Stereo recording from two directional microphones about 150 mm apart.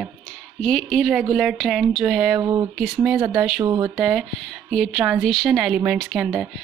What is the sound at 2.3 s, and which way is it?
Speech, 25° right (ahead or behind).